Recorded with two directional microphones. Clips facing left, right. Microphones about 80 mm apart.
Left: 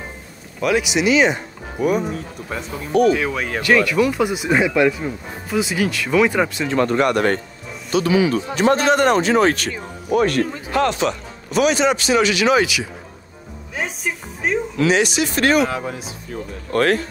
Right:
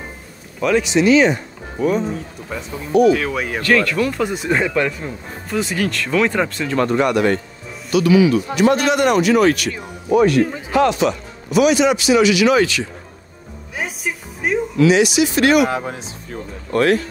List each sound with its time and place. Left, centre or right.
0.6 s speech: centre
2.9 s a man's voice: left
3.3 s speech: centre
3.6 s speech: centre
6.9 s a man's voice: left
7.9 s speech: left
10.2 s a man's voice: left
12.5 s speech: centre
13.7 s music: centre
14.8 s speech: left
15.7 s speech: right
16.7 s a man's voice: left